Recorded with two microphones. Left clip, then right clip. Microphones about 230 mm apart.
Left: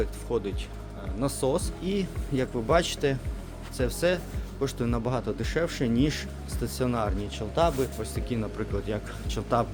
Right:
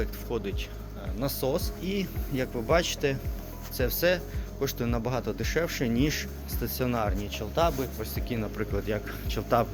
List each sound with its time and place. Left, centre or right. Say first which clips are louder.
0.0 s speech: left 3 dB; centre
3.8 s speech: even; centre
8.3 s speech: right 1 dB; centre